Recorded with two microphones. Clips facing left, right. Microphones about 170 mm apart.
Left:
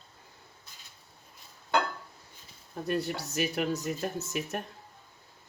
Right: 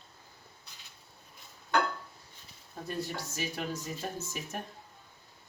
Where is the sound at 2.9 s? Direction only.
70° left (ahead or behind).